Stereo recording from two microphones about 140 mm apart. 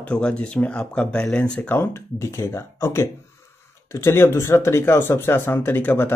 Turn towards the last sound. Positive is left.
turn(degrees=15)  # may be behind; listen again after turning